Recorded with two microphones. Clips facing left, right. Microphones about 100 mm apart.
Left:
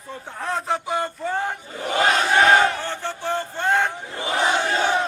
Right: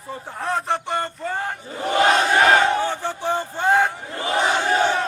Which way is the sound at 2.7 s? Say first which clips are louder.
Right 5 dB; 15° right (ahead or behind).